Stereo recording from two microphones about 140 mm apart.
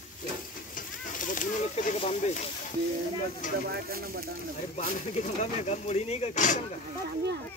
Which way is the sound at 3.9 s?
90° right.